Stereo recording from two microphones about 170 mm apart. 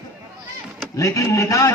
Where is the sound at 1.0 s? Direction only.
20° left (ahead or behind).